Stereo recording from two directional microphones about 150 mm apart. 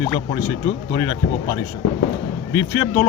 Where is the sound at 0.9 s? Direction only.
20° left (ahead or behind).